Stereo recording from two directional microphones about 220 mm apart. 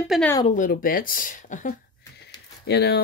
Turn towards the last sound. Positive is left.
turn(degrees=50)  # may be behind; listen again after turning